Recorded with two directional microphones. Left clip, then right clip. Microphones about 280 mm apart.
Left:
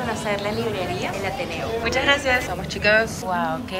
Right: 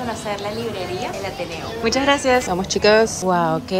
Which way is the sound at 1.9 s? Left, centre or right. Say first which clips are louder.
Right 3 dB; right.